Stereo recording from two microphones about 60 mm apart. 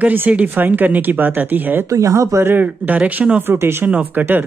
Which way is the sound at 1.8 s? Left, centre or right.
Right.